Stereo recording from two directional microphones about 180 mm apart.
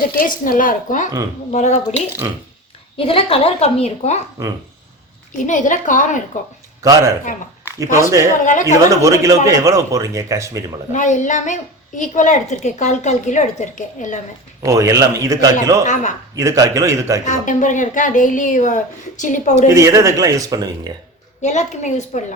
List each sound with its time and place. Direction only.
0.2 s a woman's voice: 50° left (ahead or behind)
3.0 s a woman's voice: 30° left (ahead or behind)
5.5 s a woman's voice: 45° left (ahead or behind)
6.8 s a man's voice: 20° right (ahead or behind)
10.9 s a woman's voice: 45° left (ahead or behind)
14.6 s speech: 20° right (ahead or behind)
17.2 s a woman's voice: 45° left (ahead or behind)
19.6 s speech: 15° right (ahead or behind)
21.4 s a woman's voice: 40° left (ahead or behind)